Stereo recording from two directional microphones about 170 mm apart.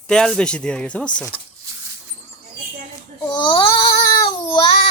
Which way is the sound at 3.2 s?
25° left (ahead or behind).